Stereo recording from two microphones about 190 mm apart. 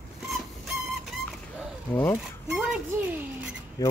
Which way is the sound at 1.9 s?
10° left (ahead or behind).